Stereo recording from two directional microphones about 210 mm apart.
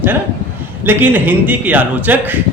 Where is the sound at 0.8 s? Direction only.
10° right (ahead or behind).